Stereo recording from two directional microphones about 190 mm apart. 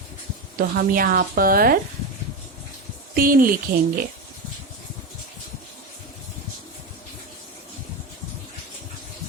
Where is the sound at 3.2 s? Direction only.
50° right (ahead or behind).